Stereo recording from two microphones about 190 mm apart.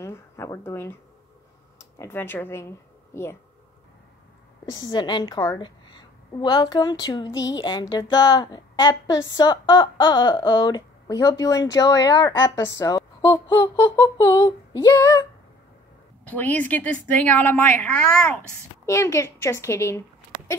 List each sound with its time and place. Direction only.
0.0 s a sound: 15° left (ahead or behind)
1.8 s speech: 15° left (ahead or behind)
4.6 s a woman's voice: 20° left (ahead or behind)
16.3 s a woman's voice: 10° left (ahead or behind)